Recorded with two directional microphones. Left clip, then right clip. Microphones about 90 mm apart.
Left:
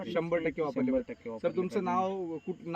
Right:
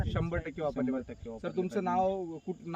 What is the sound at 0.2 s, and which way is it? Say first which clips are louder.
Speech: left 6 dB; 20° right (ahead or behind).